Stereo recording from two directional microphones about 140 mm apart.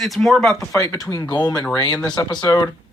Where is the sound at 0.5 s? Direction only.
25° left (ahead or behind).